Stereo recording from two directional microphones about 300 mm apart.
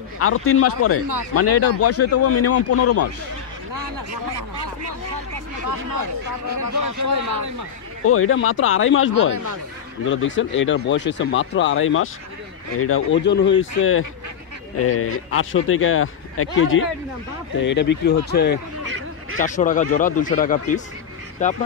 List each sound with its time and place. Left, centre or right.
0.2 s speech: left
6.8 s speech: right
8.0 s speech: left
9.3 s speech: right
10.0 s speech: left